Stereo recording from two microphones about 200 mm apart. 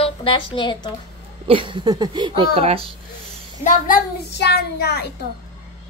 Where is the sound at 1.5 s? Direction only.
25° right (ahead or behind).